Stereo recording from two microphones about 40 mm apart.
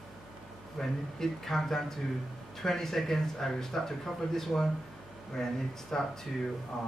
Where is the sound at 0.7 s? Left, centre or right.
Centre.